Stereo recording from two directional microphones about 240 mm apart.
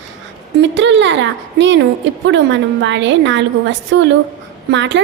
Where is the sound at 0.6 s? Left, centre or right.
Right.